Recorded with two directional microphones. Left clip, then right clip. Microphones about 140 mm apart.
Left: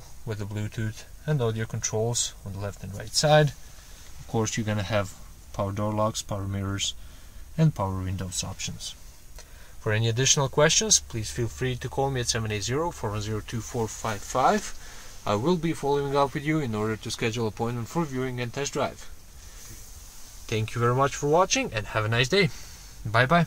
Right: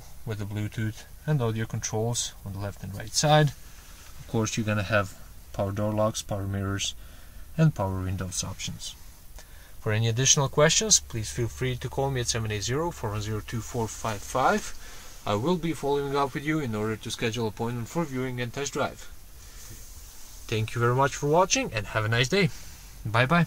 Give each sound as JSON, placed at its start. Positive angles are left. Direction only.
{"t": 0.3, "sound": "speech", "side_deg": 0}
{"t": 20.4, "sound": "speech", "side_deg": 0}